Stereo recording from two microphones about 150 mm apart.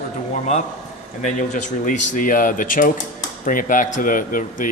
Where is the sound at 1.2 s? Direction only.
55° left (ahead or behind).